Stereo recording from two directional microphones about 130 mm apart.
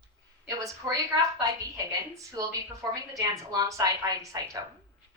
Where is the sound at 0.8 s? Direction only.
20° right (ahead or behind).